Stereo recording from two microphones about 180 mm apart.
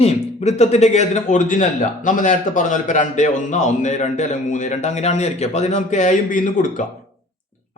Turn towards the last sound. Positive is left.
turn(degrees=45)  # may be behind; listen again after turning